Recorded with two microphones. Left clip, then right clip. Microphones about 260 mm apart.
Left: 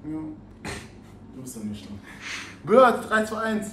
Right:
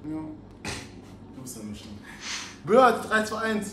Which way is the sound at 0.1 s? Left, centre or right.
Centre.